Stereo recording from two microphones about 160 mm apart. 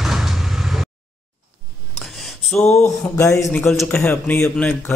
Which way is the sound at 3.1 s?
20° left (ahead or behind).